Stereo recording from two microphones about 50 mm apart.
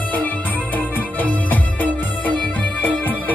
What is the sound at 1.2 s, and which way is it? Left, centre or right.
Music, left.